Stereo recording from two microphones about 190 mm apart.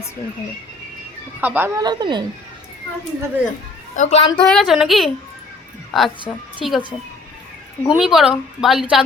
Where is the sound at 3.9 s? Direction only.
40° left (ahead or behind).